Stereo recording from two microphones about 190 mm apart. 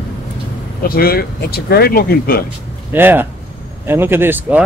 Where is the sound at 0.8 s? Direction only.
50° left (ahead or behind).